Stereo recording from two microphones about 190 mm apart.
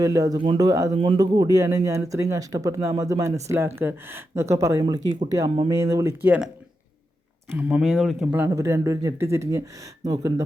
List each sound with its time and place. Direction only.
0.0 s speech: 15° right (ahead or behind)
7.5 s speech: 5° right (ahead or behind)